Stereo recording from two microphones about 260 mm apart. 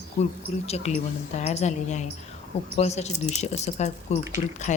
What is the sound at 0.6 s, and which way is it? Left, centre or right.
Speech, left.